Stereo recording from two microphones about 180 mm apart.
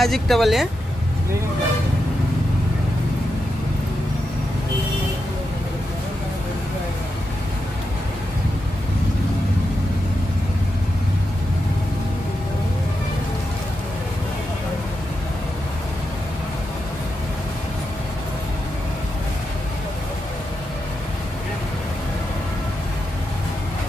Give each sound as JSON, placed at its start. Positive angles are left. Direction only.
{"t": 0.0, "sound": "speech", "side_deg": 0}